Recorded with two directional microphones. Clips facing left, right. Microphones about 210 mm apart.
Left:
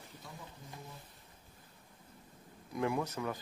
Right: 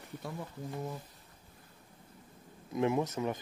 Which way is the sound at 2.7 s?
20° right (ahead or behind).